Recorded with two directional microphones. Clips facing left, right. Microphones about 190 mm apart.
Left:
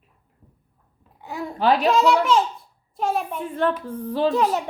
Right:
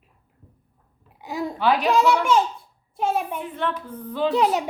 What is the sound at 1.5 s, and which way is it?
Speech, 40° left (ahead or behind).